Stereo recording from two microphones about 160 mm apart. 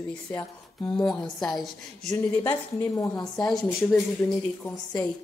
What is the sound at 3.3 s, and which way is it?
A woman's voice, centre (ahead or behind).